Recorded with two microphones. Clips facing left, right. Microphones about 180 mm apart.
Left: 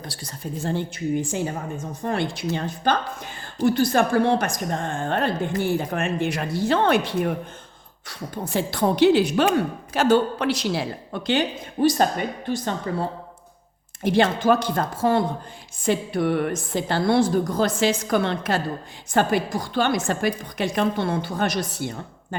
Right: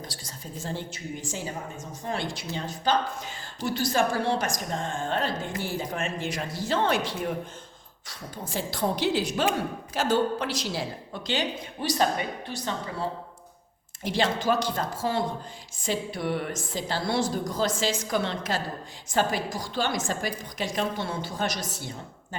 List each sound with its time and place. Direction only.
0.0 s a woman's voice: 60° left (ahead or behind)
14.0 s a woman's voice: 55° left (ahead or behind)